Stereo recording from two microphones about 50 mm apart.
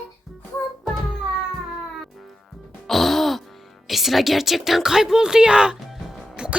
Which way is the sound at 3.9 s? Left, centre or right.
Centre.